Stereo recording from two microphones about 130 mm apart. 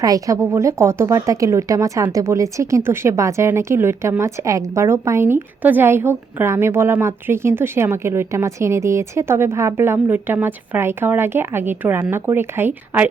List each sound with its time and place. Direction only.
0.0 s a woman's voice: 25° right (ahead or behind)